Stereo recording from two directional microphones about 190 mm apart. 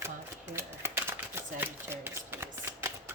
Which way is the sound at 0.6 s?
15° right (ahead or behind).